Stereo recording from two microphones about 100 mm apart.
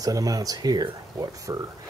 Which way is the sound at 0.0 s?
35° right (ahead or behind).